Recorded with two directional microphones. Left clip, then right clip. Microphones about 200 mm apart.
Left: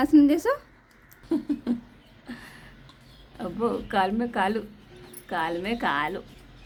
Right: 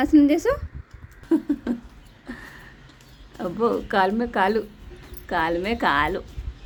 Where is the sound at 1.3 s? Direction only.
10° right (ahead or behind).